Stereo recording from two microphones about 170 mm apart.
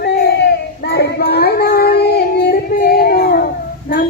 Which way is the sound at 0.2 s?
75° left (ahead or behind).